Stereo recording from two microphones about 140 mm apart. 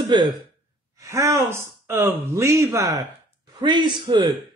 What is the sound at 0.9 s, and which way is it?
A man's voice, 20° right (ahead or behind).